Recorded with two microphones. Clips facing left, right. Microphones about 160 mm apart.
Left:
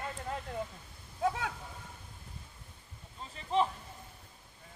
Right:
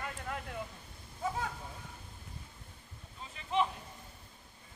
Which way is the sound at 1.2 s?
70° left (ahead or behind).